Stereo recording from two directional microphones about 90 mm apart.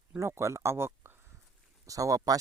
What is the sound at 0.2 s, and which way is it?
Speech, 30° right (ahead or behind).